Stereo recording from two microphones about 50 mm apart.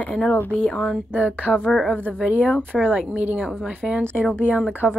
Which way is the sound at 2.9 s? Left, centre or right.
Right.